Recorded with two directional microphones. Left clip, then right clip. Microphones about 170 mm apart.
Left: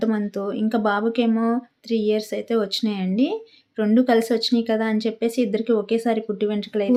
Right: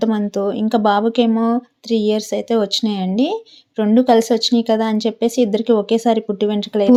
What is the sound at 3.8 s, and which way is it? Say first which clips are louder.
Speech: right 5 dB; 25° right (ahead or behind).